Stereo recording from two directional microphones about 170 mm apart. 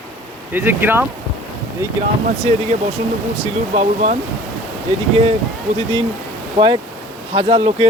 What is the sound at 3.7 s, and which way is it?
Speech, 45° right (ahead or behind).